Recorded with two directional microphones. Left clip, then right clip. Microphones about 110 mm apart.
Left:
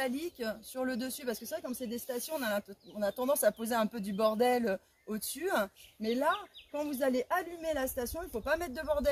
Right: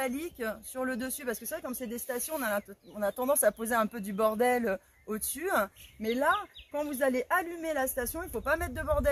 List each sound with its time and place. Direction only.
0.0 s speech: 25° left (ahead or behind)